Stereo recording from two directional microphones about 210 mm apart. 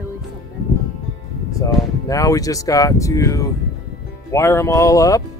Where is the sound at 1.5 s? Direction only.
15° left (ahead or behind).